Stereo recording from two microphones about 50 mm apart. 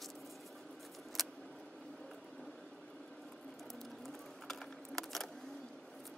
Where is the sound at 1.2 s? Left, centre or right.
Centre.